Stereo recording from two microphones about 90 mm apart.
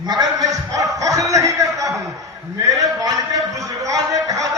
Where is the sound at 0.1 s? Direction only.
50° right (ahead or behind).